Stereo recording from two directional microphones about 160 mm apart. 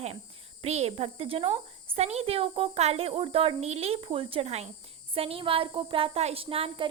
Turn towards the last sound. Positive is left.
turn(degrees=-35)  # may be behind; listen again after turning